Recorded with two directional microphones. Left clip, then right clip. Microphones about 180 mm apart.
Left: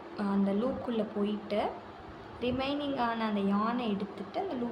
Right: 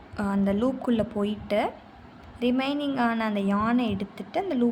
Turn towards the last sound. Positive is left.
turn(degrees=-60)  # may be behind; listen again after turning